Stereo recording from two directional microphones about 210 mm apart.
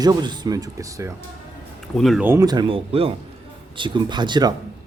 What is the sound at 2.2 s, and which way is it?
Speech, 15° right (ahead or behind).